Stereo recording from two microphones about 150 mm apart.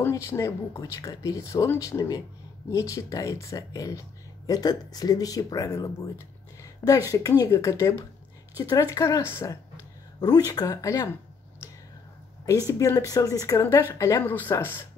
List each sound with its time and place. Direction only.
0.0 s speech: 20° left (ahead or behind)
12.4 s speech: 20° left (ahead or behind)